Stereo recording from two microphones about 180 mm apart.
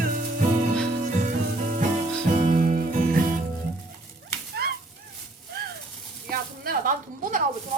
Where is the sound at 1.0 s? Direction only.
45° right (ahead or behind).